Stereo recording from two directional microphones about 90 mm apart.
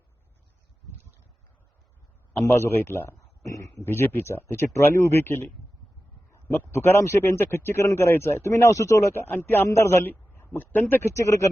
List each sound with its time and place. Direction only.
2.3 s a man's voice: 30° left (ahead or behind)
3.8 s a man's voice: 25° left (ahead or behind)